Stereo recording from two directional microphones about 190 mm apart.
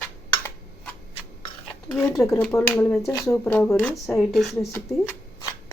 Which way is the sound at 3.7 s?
15° left (ahead or behind).